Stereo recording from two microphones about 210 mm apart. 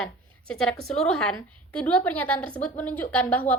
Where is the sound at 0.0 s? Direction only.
5° left (ahead or behind).